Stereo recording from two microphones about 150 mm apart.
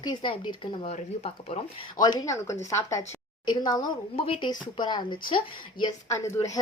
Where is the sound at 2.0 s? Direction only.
25° left (ahead or behind).